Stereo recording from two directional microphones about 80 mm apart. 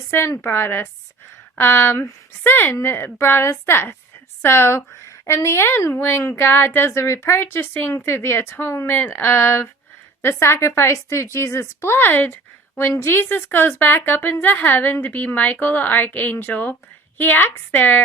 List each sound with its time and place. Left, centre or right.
0.1 s a woman's voice: left